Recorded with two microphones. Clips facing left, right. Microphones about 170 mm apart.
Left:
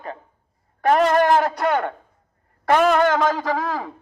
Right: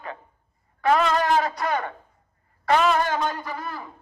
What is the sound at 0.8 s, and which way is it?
A man's voice, 50° left (ahead or behind).